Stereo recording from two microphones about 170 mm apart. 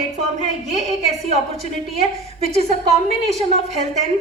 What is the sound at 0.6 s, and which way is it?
A woman's voice, 40° right (ahead or behind).